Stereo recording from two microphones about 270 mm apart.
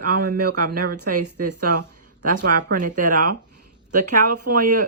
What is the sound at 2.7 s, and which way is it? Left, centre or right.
Speech, right.